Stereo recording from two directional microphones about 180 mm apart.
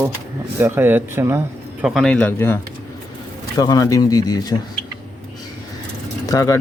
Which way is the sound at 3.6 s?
20° left (ahead or behind).